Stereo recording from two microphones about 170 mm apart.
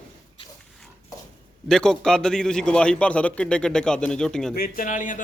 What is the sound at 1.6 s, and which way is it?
A man's voice, 5° left (ahead or behind).